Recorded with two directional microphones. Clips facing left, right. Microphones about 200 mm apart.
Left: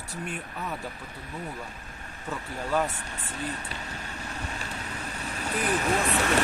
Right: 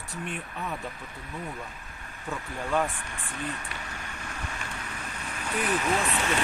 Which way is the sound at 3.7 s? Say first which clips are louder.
Left 2 dB; 30° left (ahead or behind).